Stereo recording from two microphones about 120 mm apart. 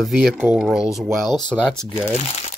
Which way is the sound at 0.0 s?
Centre (ahead or behind).